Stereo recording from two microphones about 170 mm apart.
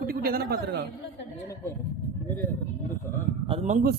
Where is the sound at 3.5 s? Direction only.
40° right (ahead or behind).